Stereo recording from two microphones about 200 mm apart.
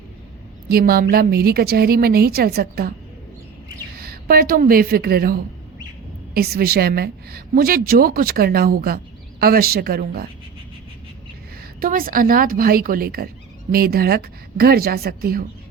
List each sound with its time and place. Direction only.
0.7 s speech: 50° right (ahead or behind)
4.0 s a woman's voice: 50° right (ahead or behind)
11.8 s speech: 45° right (ahead or behind)